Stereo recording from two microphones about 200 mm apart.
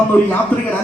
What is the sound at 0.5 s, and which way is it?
Speech, 5° left (ahead or behind).